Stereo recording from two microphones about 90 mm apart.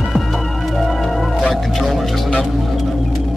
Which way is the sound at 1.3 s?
Centre (ahead or behind).